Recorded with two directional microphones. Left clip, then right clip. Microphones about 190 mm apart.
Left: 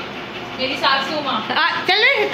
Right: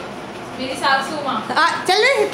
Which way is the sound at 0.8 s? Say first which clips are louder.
Right 1 dB; 5° right (ahead or behind).